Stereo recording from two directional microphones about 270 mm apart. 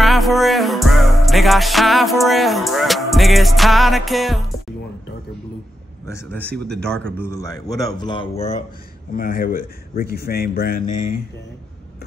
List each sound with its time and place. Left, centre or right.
0.0 s music: centre
6.0 s a man's voice: centre
9.1 s speech: left